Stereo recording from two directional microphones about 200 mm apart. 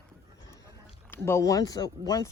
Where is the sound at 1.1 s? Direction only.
15° left (ahead or behind).